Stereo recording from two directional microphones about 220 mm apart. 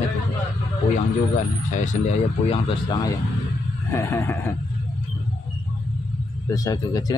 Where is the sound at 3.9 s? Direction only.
10° left (ahead or behind).